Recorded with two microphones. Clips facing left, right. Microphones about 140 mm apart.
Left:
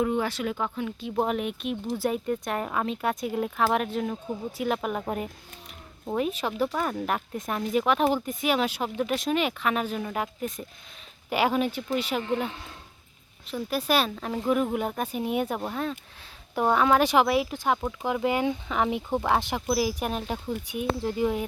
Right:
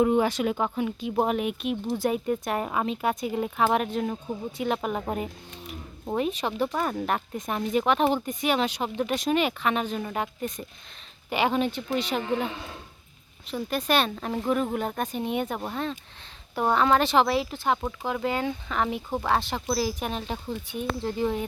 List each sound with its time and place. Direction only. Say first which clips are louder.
0.0 s speech: right 4 dB; 20° right (ahead or behind)
1.2 s speech: right 1 dB; 5° right (ahead or behind)
13.5 s speech: even; 5° left (ahead or behind)